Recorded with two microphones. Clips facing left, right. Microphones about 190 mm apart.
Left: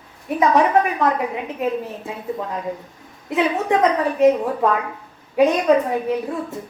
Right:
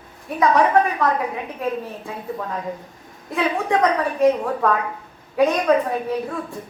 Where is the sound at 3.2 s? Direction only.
20° left (ahead or behind).